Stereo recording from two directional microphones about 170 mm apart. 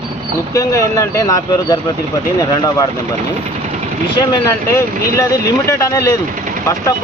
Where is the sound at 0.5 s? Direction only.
20° left (ahead or behind).